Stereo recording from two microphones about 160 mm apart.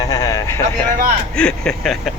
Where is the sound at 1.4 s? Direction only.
5° left (ahead or behind).